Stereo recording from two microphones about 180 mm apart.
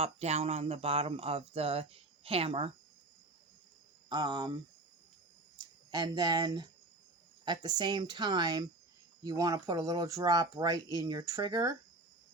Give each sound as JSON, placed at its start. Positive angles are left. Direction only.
{"t": 0.0, "sound": "speech", "side_deg": -35}
{"t": 4.1, "sound": "speech", "side_deg": -25}
{"t": 5.9, "sound": "speech", "side_deg": -20}